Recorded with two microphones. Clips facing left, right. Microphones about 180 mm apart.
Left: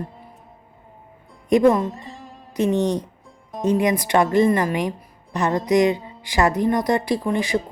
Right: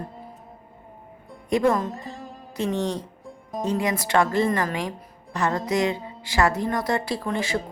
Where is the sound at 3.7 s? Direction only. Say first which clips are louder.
Left 6 dB; 20° left (ahead or behind).